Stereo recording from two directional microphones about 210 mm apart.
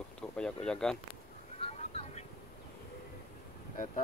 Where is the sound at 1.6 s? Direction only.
30° left (ahead or behind).